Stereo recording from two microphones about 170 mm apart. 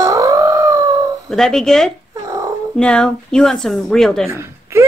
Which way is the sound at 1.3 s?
5° left (ahead or behind).